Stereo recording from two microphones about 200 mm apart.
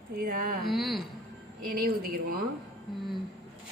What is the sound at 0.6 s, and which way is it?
Speech, centre (ahead or behind).